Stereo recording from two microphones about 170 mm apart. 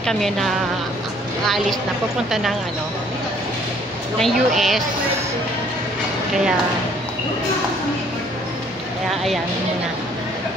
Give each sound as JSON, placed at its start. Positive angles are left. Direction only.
{"t": 0.0, "sound": "a woman's voice", "side_deg": 0}
{"t": 4.2, "sound": "a woman's voice", "side_deg": 0}